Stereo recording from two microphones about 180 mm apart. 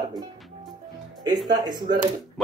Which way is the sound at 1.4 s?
25° right (ahead or behind).